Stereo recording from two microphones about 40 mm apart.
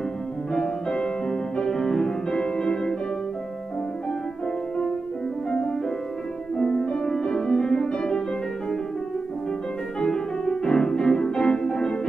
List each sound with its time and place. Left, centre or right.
0.5 s music: centre
6.5 s music: centre
9.9 s music: centre